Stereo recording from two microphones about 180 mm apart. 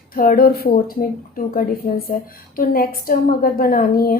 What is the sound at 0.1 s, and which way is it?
A woman's voice, 55° left (ahead or behind).